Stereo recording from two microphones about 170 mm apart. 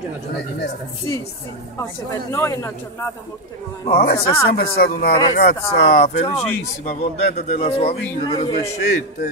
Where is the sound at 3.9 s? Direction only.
60° left (ahead or behind).